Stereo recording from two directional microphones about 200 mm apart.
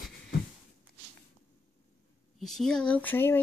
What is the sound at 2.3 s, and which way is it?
Speech, centre (ahead or behind).